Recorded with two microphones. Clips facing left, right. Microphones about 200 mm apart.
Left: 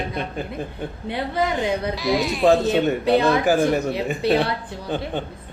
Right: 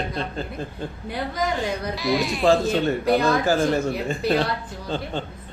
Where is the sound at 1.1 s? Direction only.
25° left (ahead or behind).